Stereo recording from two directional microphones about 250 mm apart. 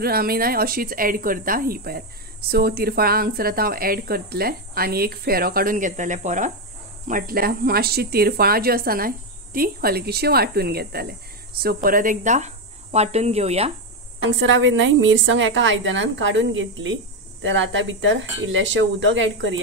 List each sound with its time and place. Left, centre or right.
0.0 s speech: right
14.2 s a woman's voice: right